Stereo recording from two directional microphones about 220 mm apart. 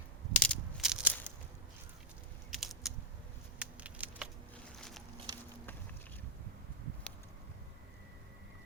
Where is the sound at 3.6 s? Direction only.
5° right (ahead or behind).